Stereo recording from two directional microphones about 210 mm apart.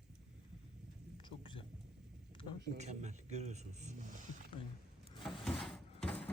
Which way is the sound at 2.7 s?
35° right (ahead or behind).